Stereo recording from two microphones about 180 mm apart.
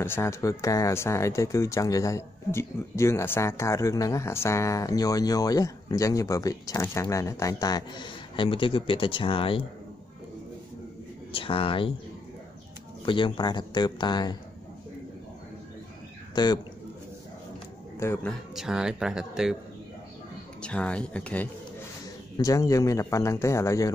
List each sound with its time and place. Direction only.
0.0 s speech: 15° left (ahead or behind); by 9.7 s 30° left (ahead or behind)
11.3 s speech: 30° left (ahead or behind)
13.0 s speech: 25° left (ahead or behind)
16.4 s speech: 25° left (ahead or behind)
17.9 s a man's voice: 15° left (ahead or behind)
18.5 s speech: 5° right (ahead or behind)
20.6 s speech: 5° left (ahead or behind)
22.4 s speech: 20° left (ahead or behind)